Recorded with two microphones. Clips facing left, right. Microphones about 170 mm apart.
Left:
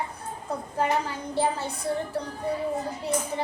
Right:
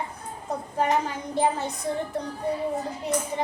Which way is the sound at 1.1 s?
20° right (ahead or behind).